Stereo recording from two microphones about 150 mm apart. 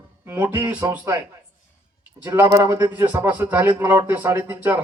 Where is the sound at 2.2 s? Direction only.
15° right (ahead or behind).